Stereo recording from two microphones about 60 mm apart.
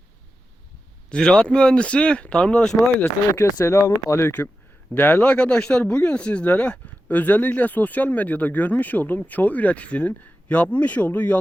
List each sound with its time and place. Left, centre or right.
1.1 s speech: centre
3.4 s speech: left
4.9 s speech: left
5.2 s speech: left